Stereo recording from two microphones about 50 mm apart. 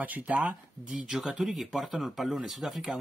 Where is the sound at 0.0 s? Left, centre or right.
Right.